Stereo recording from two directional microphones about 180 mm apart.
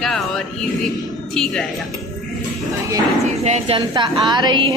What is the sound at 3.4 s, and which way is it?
A woman's voice, 35° right (ahead or behind).